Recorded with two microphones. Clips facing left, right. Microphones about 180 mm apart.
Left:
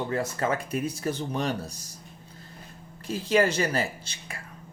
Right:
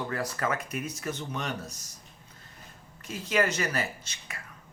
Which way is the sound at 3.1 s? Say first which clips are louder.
Left 5 dB; 30° left (ahead or behind).